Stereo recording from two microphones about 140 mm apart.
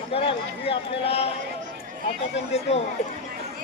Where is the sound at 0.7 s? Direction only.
45° left (ahead or behind).